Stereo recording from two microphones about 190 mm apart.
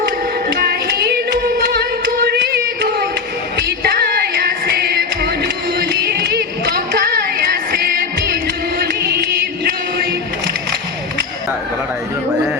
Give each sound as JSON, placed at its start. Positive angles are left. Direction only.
{"t": 0.5, "sound": "music", "side_deg": -55}
{"t": 3.8, "sound": "music", "side_deg": -60}